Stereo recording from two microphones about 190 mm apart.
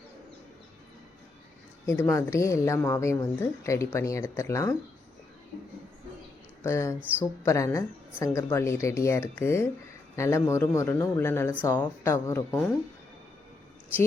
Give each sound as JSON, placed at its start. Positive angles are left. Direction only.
{"t": 1.9, "sound": "speech", "side_deg": 15}
{"t": 6.6, "sound": "speech", "side_deg": 15}
{"t": 7.0, "sound": "speech", "side_deg": -10}
{"t": 7.4, "sound": "speech", "side_deg": 15}